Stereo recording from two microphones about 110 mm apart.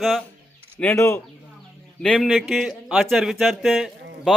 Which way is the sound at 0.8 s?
15° left (ahead or behind).